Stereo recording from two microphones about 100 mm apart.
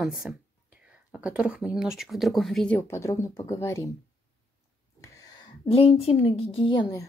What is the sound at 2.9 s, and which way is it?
Speech, 30° left (ahead or behind).